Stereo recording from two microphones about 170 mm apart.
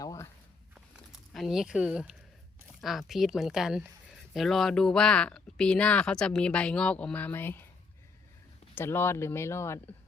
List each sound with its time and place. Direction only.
0.0 s walk: 20° left (ahead or behind)
1.3 s speech: centre (ahead or behind)
8.7 s speech: 15° left (ahead or behind)